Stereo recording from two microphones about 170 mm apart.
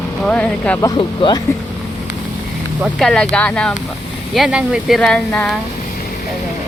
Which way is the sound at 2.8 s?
5° left (ahead or behind).